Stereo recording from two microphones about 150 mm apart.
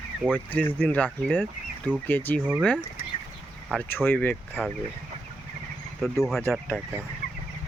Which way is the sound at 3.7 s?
15° left (ahead or behind).